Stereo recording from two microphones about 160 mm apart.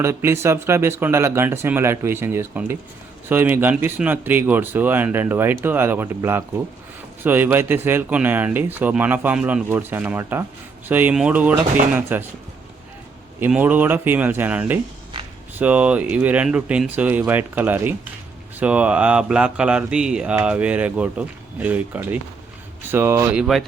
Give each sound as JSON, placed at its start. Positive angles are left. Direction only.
{"t": 0.0, "sound": "speech", "side_deg": -15}
{"t": 13.4, "sound": "speech", "side_deg": -10}